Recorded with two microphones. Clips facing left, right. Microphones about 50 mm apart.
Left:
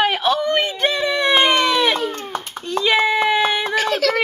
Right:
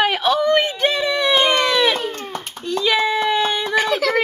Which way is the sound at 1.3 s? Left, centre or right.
Centre.